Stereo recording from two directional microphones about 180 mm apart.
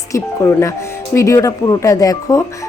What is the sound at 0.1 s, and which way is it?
Speech, 15° left (ahead or behind).